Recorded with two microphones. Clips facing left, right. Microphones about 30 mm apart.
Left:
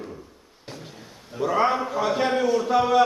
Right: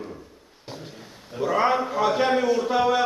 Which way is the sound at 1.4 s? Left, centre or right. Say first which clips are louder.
Even; centre.